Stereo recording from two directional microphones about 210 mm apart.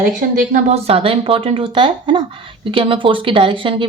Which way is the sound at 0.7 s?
30° right (ahead or behind).